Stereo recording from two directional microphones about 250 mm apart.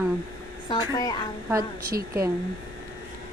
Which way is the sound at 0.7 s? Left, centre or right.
Centre.